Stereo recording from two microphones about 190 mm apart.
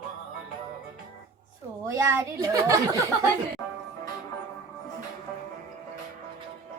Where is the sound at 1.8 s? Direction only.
15° right (ahead or behind).